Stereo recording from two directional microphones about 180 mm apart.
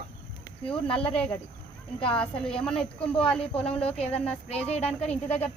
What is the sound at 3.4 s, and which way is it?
Speech, 35° left (ahead or behind).